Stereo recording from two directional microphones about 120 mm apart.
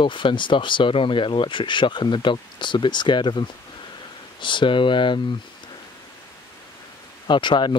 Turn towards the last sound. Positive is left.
turn(degrees=40)  # may be behind; listen again after turning